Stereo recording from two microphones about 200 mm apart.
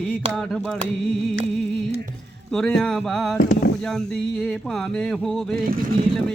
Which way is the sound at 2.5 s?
Centre (ahead or behind).